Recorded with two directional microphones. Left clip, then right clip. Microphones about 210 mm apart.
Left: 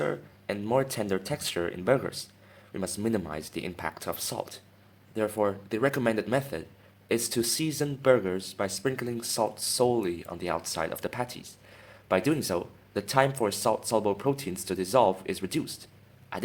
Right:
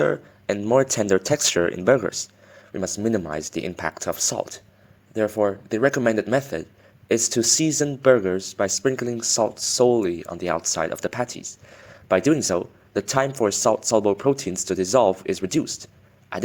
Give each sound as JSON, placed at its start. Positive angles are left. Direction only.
{"t": 0.0, "sound": "speech", "side_deg": -30}